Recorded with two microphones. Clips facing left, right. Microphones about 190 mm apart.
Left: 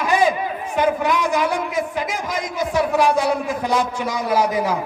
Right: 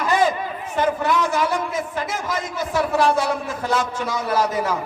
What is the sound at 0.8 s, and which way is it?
A man's voice, 15° left (ahead or behind).